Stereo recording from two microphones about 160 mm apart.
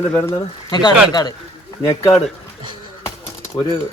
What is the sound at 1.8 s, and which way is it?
Speech, 15° left (ahead or behind).